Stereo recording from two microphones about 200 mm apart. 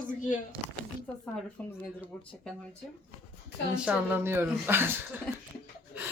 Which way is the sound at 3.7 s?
5° right (ahead or behind).